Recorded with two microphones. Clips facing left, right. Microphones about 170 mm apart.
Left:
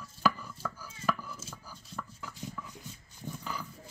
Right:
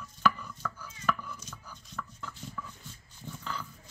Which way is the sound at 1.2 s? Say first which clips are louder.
Even; 5° left (ahead or behind).